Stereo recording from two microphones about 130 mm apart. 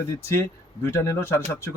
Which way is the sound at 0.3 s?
20° left (ahead or behind).